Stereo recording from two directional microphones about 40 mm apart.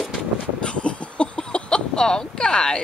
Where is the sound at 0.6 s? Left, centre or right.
Left.